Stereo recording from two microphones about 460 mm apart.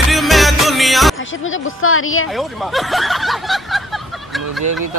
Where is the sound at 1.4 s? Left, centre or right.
Left.